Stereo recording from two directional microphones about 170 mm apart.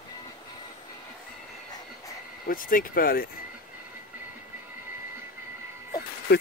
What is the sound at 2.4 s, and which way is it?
Speech, 55° left (ahead or behind).